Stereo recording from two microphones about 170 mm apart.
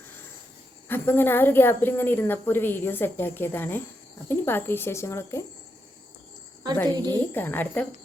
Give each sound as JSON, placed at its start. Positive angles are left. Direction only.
{"t": 0.9, "sound": "a woman's voice", "side_deg": 10}
{"t": 6.8, "sound": "a woman's voice", "side_deg": -25}
{"t": 7.3, "sound": "a woman's voice", "side_deg": 10}